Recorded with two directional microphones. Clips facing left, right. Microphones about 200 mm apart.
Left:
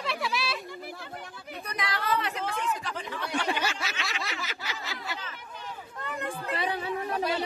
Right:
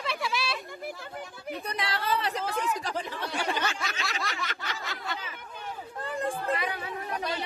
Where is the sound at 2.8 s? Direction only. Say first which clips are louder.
Right 2 dB; 35° right (ahead or behind).